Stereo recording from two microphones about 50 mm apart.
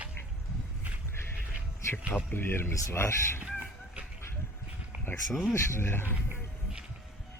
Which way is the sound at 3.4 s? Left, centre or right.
Right.